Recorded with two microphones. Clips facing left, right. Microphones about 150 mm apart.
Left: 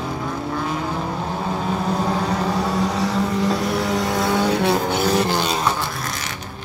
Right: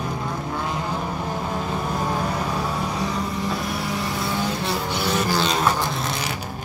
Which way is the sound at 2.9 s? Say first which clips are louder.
Left 5 dB; 85° left.